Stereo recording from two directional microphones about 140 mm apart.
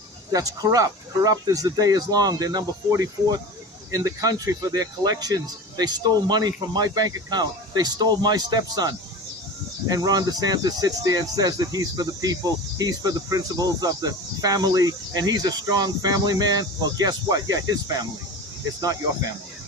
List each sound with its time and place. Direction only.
0.3 s speech: 25° right (ahead or behind)